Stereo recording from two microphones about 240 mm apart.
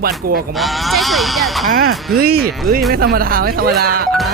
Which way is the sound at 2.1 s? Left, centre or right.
Right.